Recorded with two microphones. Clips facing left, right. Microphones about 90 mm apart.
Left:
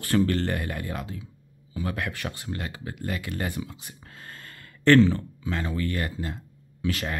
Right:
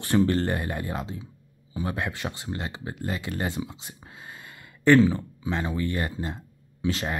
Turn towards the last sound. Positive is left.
turn(degrees=-25)  # may be behind; listen again after turning